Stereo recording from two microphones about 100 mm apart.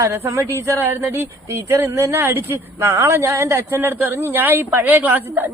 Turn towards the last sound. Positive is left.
turn(degrees=-20)  # may be behind; listen again after turning